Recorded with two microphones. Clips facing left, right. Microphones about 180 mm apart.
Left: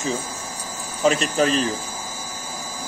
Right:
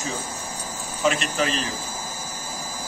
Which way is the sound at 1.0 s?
35° left (ahead or behind).